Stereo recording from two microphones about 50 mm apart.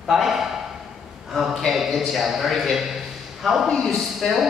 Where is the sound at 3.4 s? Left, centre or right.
Centre.